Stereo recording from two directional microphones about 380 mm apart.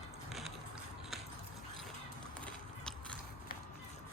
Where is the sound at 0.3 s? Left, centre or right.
Centre.